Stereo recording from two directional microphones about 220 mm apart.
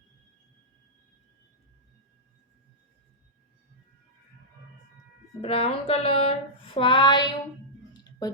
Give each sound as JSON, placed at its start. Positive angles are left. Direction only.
{"t": 5.4, "sound": "speech", "side_deg": 25}